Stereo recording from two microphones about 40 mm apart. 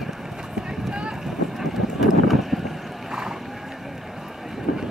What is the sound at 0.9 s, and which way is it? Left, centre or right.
Boat, right.